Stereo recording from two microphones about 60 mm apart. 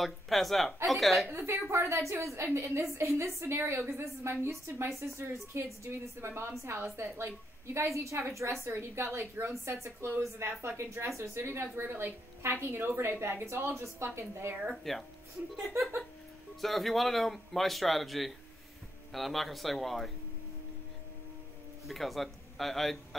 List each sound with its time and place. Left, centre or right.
0.0 s speech: centre
1.3 s a woman's voice: right
8.6 s a woman's voice: right
14.9 s speech: centre
16.6 s speech: centre
21.8 s speech: centre